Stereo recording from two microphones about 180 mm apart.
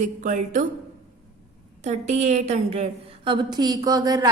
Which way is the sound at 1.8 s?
40° right (ahead or behind).